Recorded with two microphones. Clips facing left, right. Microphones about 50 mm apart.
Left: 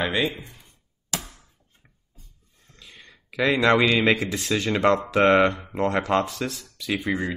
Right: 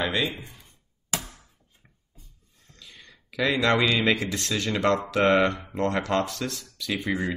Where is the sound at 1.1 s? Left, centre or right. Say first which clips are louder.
Even; right.